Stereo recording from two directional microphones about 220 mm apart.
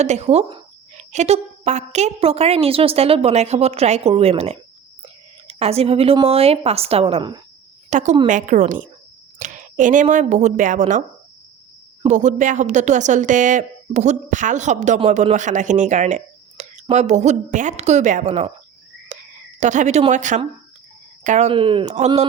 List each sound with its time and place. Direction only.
0.0 s speech: 30° right (ahead or behind)
7.9 s a woman's voice: 35° right (ahead or behind)
12.0 s a woman's voice: 35° right (ahead or behind)
19.1 s whispering: 35° right (ahead or behind)
19.5 s a woman's voice: 35° right (ahead or behind)